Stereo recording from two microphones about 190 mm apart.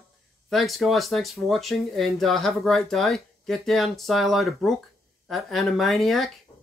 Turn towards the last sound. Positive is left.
turn(degrees=0)  # may be behind; listen again after turning